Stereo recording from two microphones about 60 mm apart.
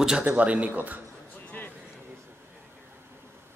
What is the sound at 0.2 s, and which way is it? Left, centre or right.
Speech, right.